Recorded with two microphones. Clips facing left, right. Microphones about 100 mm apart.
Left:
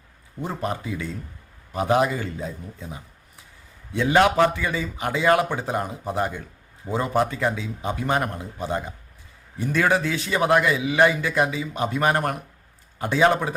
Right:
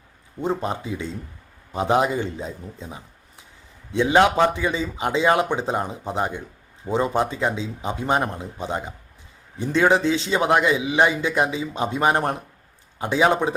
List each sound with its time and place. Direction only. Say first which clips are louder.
0.4 s a man's voice: right 3 dB; 25° right (ahead or behind)